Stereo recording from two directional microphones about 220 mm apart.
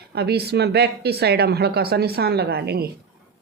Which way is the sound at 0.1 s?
45° right (ahead or behind).